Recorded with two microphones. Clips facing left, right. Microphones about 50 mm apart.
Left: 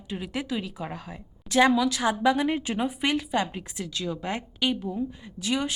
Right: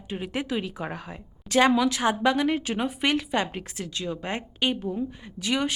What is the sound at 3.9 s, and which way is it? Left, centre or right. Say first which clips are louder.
Speech: even; right.